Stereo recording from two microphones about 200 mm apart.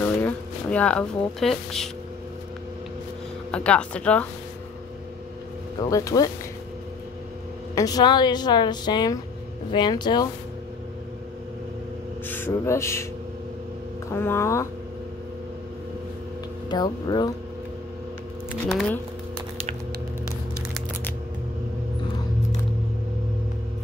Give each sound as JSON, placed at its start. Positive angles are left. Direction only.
{"t": 0.0, "sound": "speech", "side_deg": 10}
{"t": 3.5, "sound": "speech", "side_deg": 5}
{"t": 5.8, "sound": "speech", "side_deg": 15}
{"t": 7.7, "sound": "a woman's voice", "side_deg": 20}
{"t": 12.3, "sound": "speech", "side_deg": 10}
{"t": 14.1, "sound": "speech", "side_deg": 10}
{"t": 16.6, "sound": "a woman's voice", "side_deg": 20}
{"t": 18.7, "sound": "speech", "side_deg": 5}